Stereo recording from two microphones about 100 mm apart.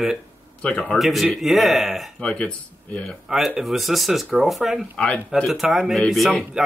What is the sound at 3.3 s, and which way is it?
Speech, 5° right (ahead or behind).